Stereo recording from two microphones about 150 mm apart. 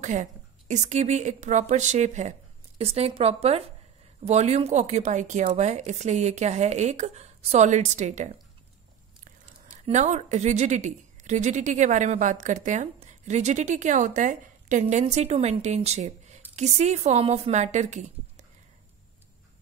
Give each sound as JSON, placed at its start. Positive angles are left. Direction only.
{"t": 0.0, "sound": "a woman's voice", "side_deg": -55}
{"t": 9.7, "sound": "a woman's voice", "side_deg": -50}